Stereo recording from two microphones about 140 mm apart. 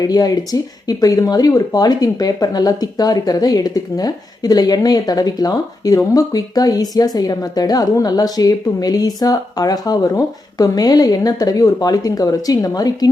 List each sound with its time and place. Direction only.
0.0 s speech: 25° left (ahead or behind)